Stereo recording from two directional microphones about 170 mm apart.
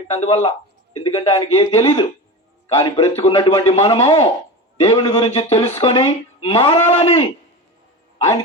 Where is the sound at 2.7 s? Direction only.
35° left (ahead or behind).